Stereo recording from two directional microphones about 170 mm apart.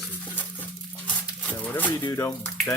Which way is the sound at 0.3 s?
10° left (ahead or behind).